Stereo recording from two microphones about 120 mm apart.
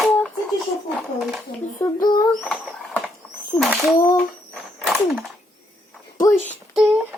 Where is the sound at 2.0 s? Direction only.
35° left (ahead or behind).